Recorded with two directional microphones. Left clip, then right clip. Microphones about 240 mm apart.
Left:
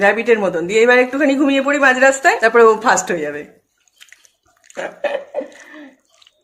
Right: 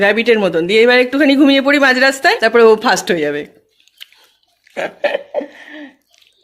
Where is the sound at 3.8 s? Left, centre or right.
Right.